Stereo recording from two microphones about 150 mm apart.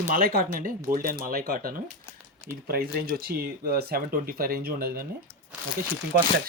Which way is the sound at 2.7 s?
90° right.